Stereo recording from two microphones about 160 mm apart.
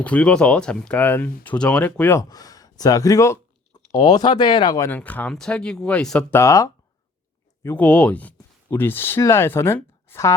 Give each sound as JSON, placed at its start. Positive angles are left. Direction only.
{"t": 0.0, "sound": "speech", "side_deg": 10}
{"t": 2.3, "sound": "speech", "side_deg": 25}
{"t": 4.9, "sound": "speech", "side_deg": 10}
{"t": 6.3, "sound": "speech", "side_deg": 20}